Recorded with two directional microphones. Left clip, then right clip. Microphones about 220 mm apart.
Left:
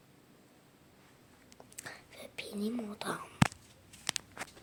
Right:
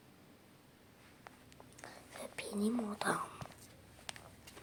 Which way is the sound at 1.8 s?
35° left (ahead or behind).